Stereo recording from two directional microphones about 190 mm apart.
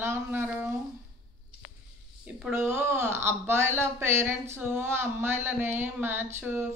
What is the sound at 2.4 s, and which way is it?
Speech, 10° right (ahead or behind).